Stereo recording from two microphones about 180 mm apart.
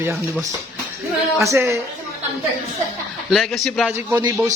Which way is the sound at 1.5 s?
15° right (ahead or behind).